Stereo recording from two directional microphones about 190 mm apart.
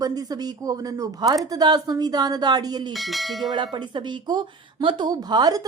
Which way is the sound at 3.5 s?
25° right (ahead or behind).